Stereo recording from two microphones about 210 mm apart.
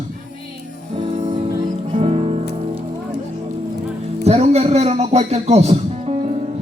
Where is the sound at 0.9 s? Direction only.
30° right (ahead or behind).